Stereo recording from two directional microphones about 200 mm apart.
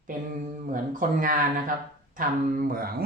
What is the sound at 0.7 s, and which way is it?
Speech, 40° right (ahead or behind).